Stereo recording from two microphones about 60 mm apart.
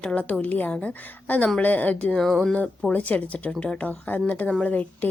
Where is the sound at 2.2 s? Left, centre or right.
Centre.